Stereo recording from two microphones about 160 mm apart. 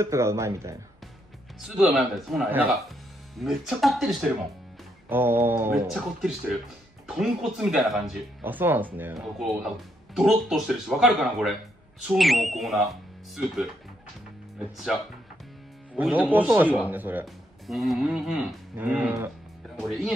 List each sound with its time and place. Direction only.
0.0 s a man's voice: 15° right (ahead or behind)
1.6 s speech: centre (ahead or behind)
5.1 s a man's voice: 15° right (ahead or behind)
7.2 s speech: centre (ahead or behind)
8.4 s a man's voice: 10° right (ahead or behind)
9.4 s speech: centre (ahead or behind)
16.0 s a man's voice: 10° right (ahead or behind)
17.6 s speech: centre (ahead or behind)
18.8 s a man's voice: 10° right (ahead or behind)
19.8 s speech: centre (ahead or behind)